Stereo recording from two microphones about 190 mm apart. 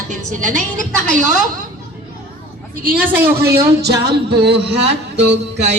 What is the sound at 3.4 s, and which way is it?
A man's voice, 60° right (ahead or behind).